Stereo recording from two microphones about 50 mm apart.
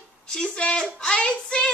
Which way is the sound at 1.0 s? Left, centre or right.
Centre.